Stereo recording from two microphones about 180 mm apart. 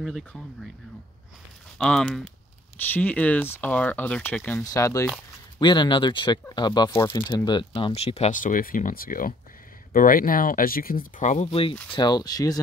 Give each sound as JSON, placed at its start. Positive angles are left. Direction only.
{"t": 0.0, "sound": "speech", "side_deg": 0}
{"t": 1.8, "sound": "speech", "side_deg": 5}